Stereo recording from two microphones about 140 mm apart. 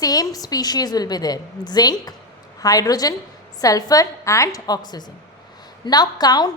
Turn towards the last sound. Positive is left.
turn(degrees=30)  # may be behind; listen again after turning